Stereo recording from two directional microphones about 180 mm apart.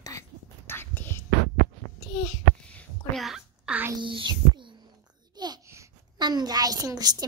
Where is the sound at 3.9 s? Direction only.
25° right (ahead or behind).